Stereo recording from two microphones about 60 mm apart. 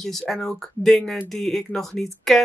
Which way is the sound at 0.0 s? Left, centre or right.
Centre.